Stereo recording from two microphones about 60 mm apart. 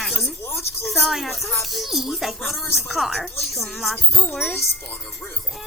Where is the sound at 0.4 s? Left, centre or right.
Left.